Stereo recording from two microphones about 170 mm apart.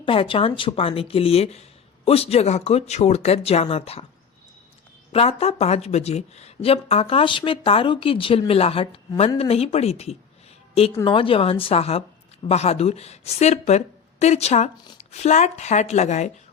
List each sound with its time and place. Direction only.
0.0 s a woman's voice: 30° left (ahead or behind)
5.1 s a woman's voice: 35° left (ahead or behind)